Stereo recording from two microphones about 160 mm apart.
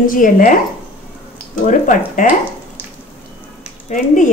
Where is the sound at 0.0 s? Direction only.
60° left (ahead or behind).